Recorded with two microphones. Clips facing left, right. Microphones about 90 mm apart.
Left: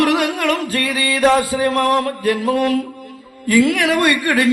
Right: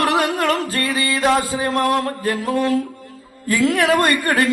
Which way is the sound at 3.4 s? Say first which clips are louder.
Left 2 dB; 30° right (ahead or behind).